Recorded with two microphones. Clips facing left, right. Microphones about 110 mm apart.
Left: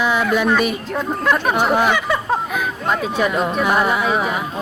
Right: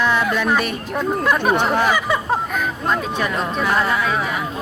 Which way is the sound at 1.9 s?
5° right (ahead or behind).